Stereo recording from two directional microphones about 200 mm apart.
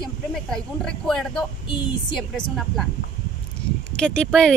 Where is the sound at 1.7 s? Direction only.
25° left (ahead or behind).